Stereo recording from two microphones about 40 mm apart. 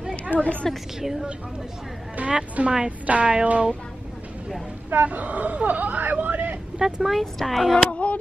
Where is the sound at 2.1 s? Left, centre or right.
Right.